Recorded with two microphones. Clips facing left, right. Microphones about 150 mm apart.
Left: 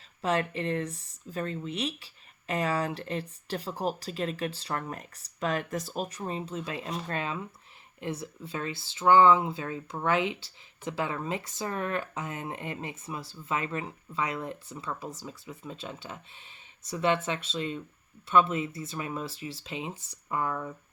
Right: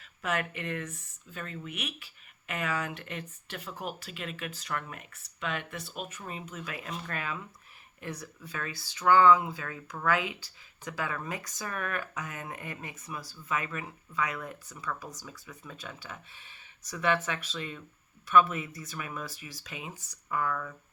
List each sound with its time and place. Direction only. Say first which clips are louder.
0.2 s speech: left 5 dB; 30° left (ahead or behind)